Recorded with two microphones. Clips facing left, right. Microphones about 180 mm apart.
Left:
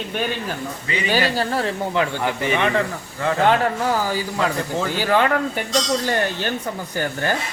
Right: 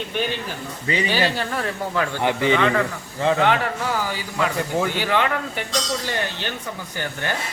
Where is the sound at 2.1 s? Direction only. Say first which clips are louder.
Right 2 dB; 20° right (ahead or behind).